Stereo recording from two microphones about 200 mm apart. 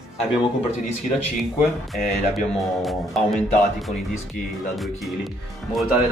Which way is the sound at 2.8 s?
Centre (ahead or behind).